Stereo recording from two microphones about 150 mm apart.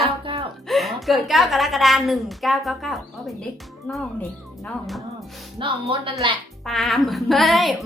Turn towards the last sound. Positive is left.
turn(degrees=0)  # may be behind; listen again after turning